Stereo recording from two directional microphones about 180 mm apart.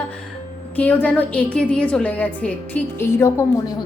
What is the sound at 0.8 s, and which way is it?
A woman's voice, 10° left (ahead or behind).